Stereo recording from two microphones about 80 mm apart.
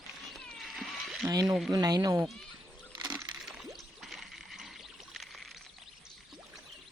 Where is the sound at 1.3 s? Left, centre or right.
Right.